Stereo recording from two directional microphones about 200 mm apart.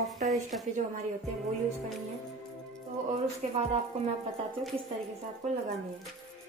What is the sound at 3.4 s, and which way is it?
Speech, 35° right (ahead or behind).